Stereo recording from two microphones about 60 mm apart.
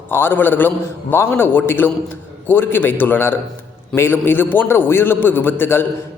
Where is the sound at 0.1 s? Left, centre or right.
Left.